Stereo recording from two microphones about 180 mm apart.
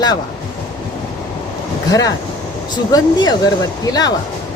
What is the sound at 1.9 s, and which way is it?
Speech, 20° left (ahead or behind).